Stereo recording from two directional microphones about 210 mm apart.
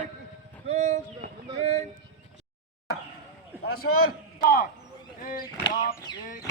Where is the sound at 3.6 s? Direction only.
90° left.